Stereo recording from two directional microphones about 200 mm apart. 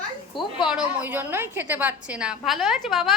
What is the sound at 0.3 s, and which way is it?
A woman's voice, 5° right (ahead or behind).